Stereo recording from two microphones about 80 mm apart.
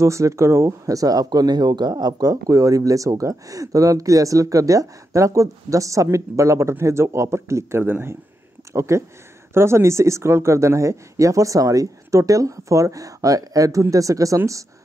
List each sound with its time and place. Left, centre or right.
0.0 s speech: right